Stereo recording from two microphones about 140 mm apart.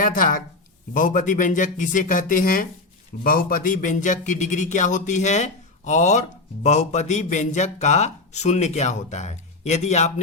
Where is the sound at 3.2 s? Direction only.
90° left.